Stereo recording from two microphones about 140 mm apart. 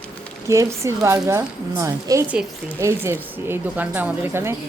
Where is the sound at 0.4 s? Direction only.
20° right (ahead or behind).